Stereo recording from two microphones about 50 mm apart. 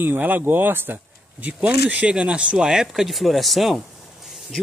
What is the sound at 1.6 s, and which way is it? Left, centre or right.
Speech, right.